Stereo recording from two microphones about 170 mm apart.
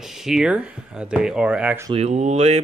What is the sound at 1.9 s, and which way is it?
Speech, 40° right (ahead or behind).